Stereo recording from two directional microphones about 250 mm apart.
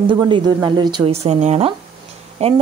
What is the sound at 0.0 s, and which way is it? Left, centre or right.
Speech, centre.